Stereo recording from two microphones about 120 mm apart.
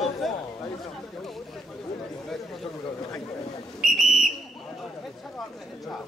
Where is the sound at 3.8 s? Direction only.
Centre (ahead or behind).